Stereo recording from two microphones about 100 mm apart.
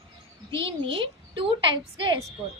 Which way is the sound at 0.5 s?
60° right (ahead or behind).